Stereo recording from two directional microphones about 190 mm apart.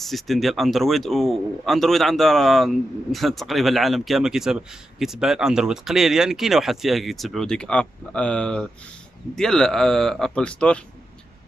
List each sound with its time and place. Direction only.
0.0 s speech: centre (ahead or behind)